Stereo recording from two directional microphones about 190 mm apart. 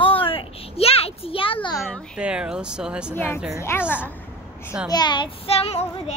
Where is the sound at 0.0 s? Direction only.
30° left (ahead or behind).